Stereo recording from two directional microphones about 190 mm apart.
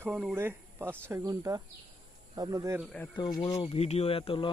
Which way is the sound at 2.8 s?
5° left (ahead or behind).